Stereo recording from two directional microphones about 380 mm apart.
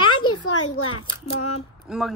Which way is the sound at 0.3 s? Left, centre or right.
Left.